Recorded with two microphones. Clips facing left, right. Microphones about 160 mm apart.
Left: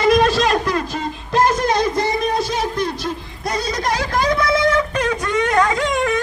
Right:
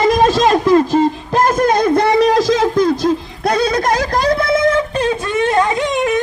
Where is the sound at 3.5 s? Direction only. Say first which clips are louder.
Right 7 dB; 60° right (ahead or behind).